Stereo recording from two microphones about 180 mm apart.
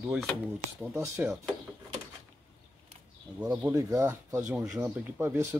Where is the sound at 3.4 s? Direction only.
20° right (ahead or behind).